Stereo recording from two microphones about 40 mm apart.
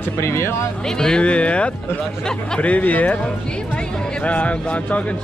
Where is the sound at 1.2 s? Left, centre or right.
Left.